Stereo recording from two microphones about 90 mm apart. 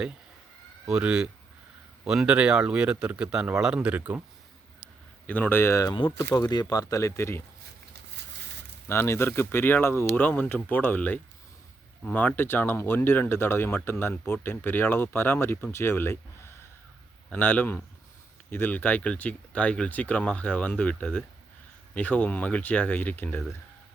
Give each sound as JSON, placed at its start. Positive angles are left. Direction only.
{"t": 0.9, "sound": "a man's voice", "side_deg": -10}
{"t": 5.2, "sound": "speech", "side_deg": 20}
{"t": 6.5, "sound": "speech", "side_deg": 45}
{"t": 8.9, "sound": "speech", "side_deg": 25}
{"t": 10.2, "sound": "speech", "side_deg": 15}
{"t": 17.3, "sound": "speech", "side_deg": 20}